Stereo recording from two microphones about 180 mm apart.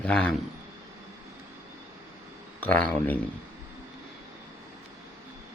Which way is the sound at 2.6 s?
10° left (ahead or behind).